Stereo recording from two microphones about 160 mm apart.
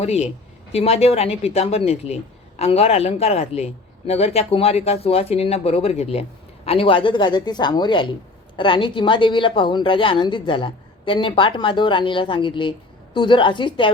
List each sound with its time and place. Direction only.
0.0 s a woman's voice: 40° left (ahead or behind)